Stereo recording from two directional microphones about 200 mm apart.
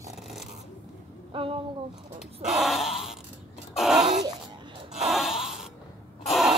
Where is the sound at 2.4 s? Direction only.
Centre (ahead or behind).